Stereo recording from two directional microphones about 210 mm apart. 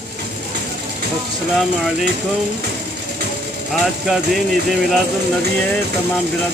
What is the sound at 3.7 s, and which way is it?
Speech, centre (ahead or behind).